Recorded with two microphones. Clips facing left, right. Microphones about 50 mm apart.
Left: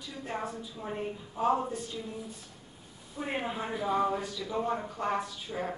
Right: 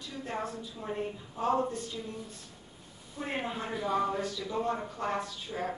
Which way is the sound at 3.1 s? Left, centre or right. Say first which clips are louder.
Left 1 dB; centre.